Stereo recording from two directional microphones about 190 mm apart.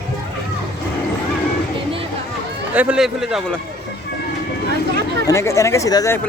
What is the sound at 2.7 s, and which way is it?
Speech, 5° right (ahead or behind).